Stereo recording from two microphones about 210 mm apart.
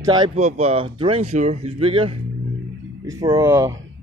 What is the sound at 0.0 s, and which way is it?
Speech, 20° right (ahead or behind).